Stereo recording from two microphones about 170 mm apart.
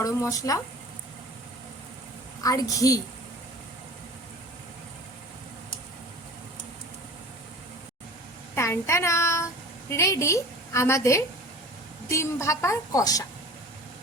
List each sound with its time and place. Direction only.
0.0 s speech: 20° left (ahead or behind)
2.4 s speech: 20° left (ahead or behind)
8.5 s a woman's voice: 15° left (ahead or behind)